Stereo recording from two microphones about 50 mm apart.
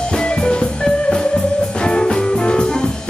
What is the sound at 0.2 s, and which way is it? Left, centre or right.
Music, centre.